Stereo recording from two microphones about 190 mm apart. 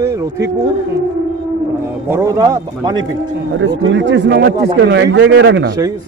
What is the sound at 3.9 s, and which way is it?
Speech, 70° right (ahead or behind).